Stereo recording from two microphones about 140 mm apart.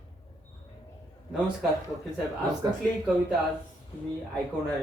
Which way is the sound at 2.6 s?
30° right (ahead or behind).